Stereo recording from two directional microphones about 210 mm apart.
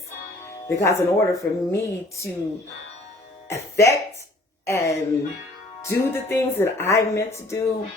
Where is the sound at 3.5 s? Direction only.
15° left (ahead or behind).